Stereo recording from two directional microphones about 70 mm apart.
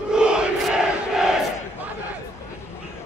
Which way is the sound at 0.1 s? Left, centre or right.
Centre.